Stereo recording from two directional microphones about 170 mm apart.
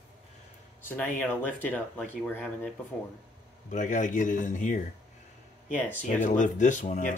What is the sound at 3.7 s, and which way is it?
Speech, 45° left (ahead or behind).